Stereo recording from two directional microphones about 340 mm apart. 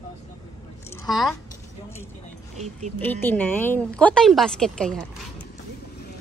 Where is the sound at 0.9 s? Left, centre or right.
Centre.